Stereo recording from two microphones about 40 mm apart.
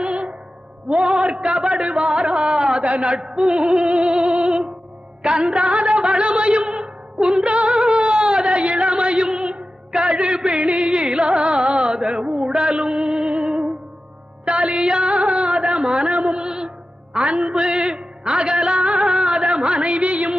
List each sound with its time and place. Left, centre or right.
0.0 s music: right
11.9 s a sound: right
14.4 s music: right